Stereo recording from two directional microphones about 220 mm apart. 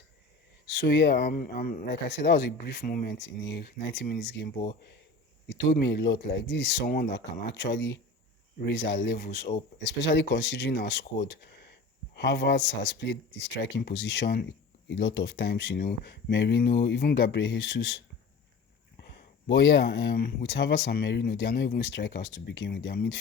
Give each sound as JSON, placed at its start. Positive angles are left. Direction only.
{"t": 0.8, "sound": "speech", "side_deg": 50}
{"t": 7.5, "sound": "speech", "side_deg": 55}
{"t": 12.1, "sound": "speech", "side_deg": 50}
{"t": 19.0, "sound": "speech", "side_deg": 50}